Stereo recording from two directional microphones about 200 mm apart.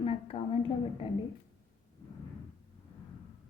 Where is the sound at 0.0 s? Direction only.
30° left (ahead or behind).